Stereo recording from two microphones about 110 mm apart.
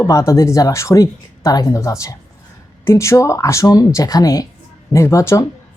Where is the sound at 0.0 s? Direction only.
30° left (ahead or behind).